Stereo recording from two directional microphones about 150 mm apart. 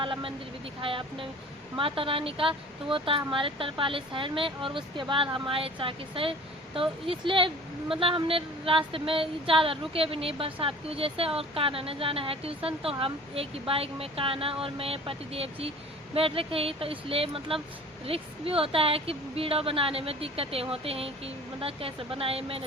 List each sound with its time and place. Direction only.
0.0 s a woman's voice: 35° right (ahead or behind)